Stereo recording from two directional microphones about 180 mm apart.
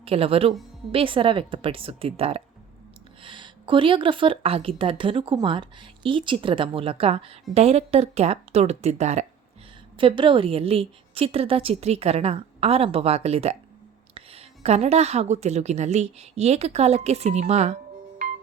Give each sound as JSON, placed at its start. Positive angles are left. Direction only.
{"t": 0.0, "sound": "a woman's voice", "side_deg": -30}